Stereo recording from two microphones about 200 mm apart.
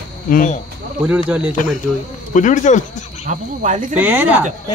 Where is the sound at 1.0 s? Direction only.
5° right (ahead or behind).